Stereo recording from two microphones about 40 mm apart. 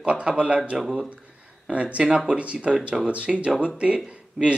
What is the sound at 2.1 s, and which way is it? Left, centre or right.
Speech, centre.